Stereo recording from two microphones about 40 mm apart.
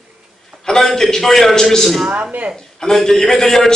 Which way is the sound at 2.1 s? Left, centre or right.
Right.